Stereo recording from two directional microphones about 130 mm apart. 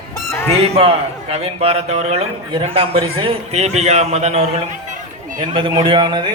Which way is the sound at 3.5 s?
55° right (ahead or behind).